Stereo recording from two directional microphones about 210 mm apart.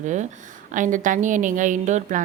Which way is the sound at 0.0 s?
35° right (ahead or behind).